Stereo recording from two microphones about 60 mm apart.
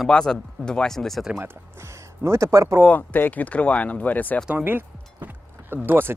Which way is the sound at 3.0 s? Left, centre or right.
Left.